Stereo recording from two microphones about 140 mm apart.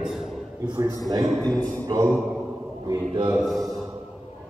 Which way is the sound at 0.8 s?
25° right (ahead or behind).